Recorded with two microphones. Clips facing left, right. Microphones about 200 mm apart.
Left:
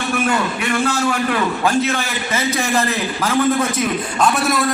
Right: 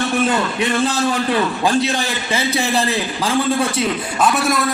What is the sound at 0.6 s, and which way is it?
A man's voice, 20° right (ahead or behind).